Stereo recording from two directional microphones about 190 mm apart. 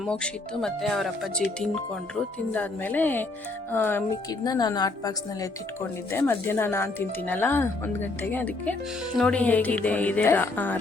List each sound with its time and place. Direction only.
0.0 s speech: 5° left (ahead or behind)